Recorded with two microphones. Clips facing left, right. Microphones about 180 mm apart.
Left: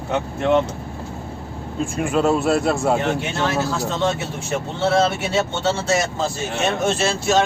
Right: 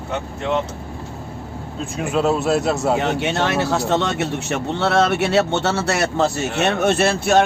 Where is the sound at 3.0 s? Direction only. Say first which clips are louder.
Right 2 dB; 70° right (ahead or behind).